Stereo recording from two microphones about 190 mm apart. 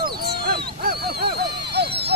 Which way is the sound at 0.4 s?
55° right (ahead or behind).